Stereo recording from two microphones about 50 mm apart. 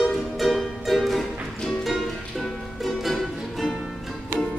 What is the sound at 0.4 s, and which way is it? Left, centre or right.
Music, centre.